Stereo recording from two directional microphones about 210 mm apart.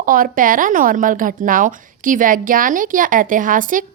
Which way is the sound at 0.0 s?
40° right (ahead or behind).